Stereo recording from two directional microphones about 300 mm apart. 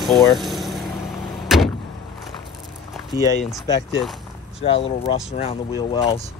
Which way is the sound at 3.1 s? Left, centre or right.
Centre.